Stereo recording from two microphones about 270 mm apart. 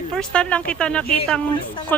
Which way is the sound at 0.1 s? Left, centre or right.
Centre.